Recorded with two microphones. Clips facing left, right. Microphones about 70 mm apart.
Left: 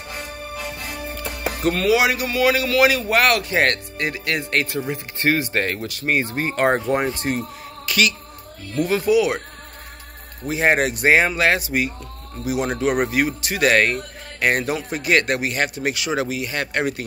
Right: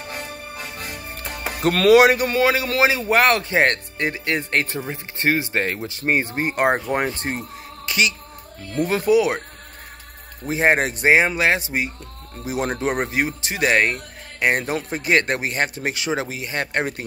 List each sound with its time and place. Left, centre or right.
1.7 s speech: right
2.0 s speech: right
2.5 s speech: right
6.6 s speech: centre
7.0 s speech: right
8.7 s speech: right
10.5 s speech: right
11.1 s speech: centre